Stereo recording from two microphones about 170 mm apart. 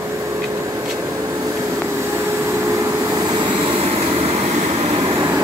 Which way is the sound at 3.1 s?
25° right (ahead or behind).